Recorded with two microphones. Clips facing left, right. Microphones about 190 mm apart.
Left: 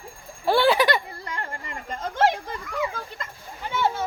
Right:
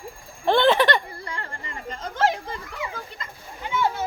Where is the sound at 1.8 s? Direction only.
45° left (ahead or behind).